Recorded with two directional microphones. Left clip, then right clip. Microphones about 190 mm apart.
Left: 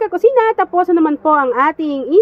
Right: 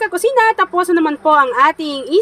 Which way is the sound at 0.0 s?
20° left (ahead or behind).